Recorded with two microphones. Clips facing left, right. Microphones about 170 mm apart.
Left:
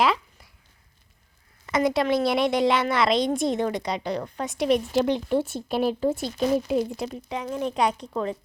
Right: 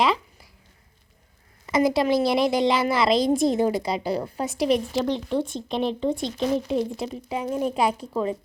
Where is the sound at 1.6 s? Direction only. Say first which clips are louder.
Right 2 dB; centre (ahead or behind).